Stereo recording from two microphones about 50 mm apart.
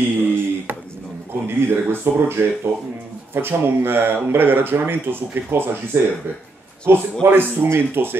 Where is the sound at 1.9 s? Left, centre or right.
Right.